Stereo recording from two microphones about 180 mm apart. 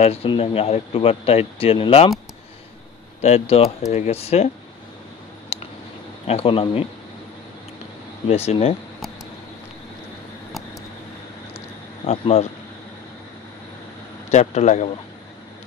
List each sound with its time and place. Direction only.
0.0 s speech: 30° left (ahead or behind)
3.2 s speech: 35° left (ahead or behind)
5.5 s a sound: 35° left (ahead or behind)
6.2 s speech: 30° left (ahead or behind)
8.3 s speech: 35° left (ahead or behind)
12.1 s speech: 35° left (ahead or behind)
14.3 s speech: 40° left (ahead or behind)